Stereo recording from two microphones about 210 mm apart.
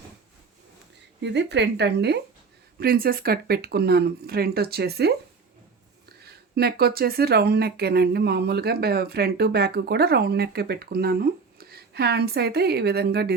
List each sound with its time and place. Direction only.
1.2 s speech: 55° right (ahead or behind)
6.2 s speech: 50° right (ahead or behind)